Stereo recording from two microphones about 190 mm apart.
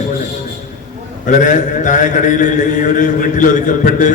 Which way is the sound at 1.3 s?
40° left (ahead or behind).